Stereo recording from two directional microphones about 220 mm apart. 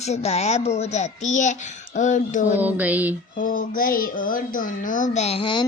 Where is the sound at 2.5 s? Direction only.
5° right (ahead or behind).